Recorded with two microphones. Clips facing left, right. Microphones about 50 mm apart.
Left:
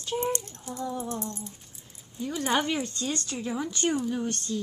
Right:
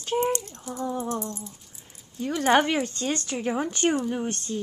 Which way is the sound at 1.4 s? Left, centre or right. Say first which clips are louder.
Even; centre.